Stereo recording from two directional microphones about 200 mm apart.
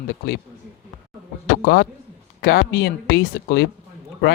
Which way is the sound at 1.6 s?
50° left (ahead or behind).